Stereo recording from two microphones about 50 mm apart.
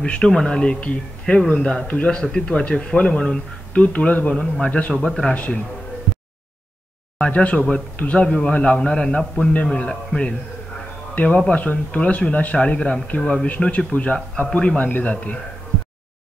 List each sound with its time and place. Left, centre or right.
0.0 s speech: left
5.3 s speech: left
7.2 s speech: left